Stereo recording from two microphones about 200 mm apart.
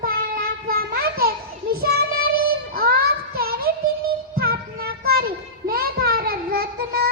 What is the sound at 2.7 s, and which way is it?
Child singing, 50° right (ahead or behind).